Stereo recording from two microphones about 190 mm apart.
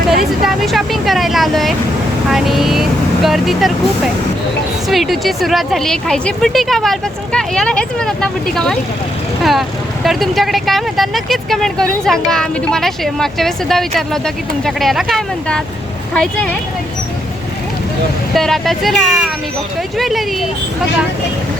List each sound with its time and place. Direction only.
0.4 s speech: centre (ahead or behind)
4.9 s speech: centre (ahead or behind)
18.3 s speech: centre (ahead or behind)